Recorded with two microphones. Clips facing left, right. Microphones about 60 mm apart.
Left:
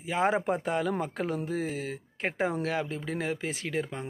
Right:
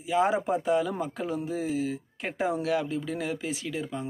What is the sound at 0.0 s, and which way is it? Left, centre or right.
A man's voice, left.